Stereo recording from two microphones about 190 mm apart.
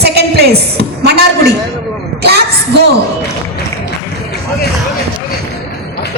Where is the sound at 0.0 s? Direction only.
55° right (ahead or behind).